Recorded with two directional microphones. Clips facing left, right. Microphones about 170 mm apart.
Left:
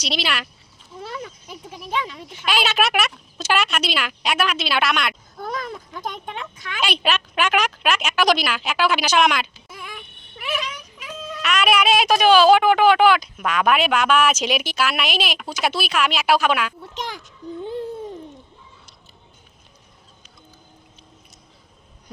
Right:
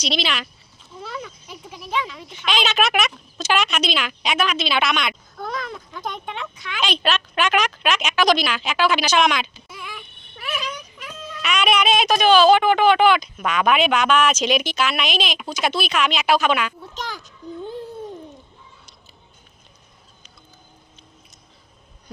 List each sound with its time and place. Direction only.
0.0 s speech: 10° left (ahead or behind)
1.5 s a sound: 45° left (ahead or behind)
2.3 s speech: 5° left (ahead or behind)
6.1 s speech: 45° left (ahead or behind)
6.8 s speech: 10° left (ahead or behind)
9.6 s a sound: 45° left (ahead or behind)
10.9 s speech: 5° left (ahead or behind)